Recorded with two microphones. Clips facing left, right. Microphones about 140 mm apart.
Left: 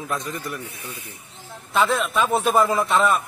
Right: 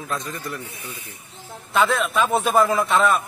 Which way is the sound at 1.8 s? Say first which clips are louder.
Right 1 dB; centre (ahead or behind).